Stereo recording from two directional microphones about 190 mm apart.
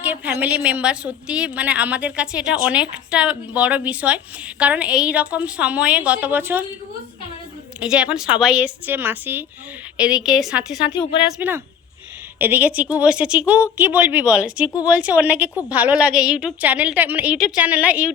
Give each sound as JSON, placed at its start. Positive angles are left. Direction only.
{"t": 0.0, "sound": "a woman's voice", "side_deg": -10}
{"t": 7.8, "sound": "a woman's voice", "side_deg": -5}
{"t": 10.8, "sound": "speech", "side_deg": 25}
{"t": 11.3, "sound": "a woman's voice", "side_deg": -10}